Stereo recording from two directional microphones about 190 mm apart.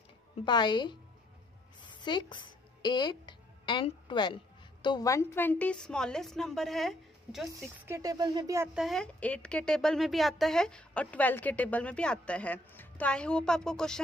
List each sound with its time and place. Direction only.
0.5 s a woman's voice: 25° left (ahead or behind)
1.8 s music: 25° left (ahead or behind)
4.8 s a woman's voice: 20° left (ahead or behind); by 7.4 s centre (ahead or behind)
7.5 s speech: 15° right (ahead or behind)
8.7 s a woman's voice: centre (ahead or behind)